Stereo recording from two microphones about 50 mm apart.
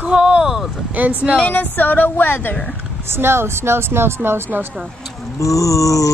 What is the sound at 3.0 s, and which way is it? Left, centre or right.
Speech, right.